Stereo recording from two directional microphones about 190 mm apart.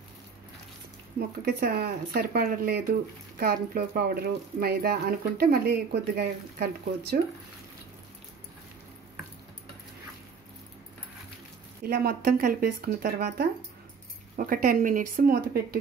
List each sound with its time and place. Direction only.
1.4 s speech: 55° right (ahead or behind)
11.8 s speech: 55° right (ahead or behind)